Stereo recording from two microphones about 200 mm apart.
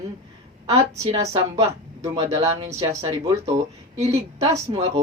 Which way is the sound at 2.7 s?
25° right (ahead or behind).